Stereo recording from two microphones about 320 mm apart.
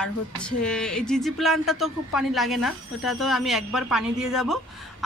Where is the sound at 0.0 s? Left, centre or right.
Centre.